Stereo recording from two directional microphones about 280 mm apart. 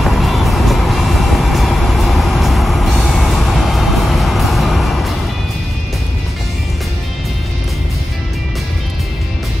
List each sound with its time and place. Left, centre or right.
0.0 s music: centre